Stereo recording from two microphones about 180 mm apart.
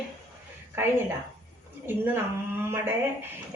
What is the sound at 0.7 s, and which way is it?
A woman's voice, 15° right (ahead or behind).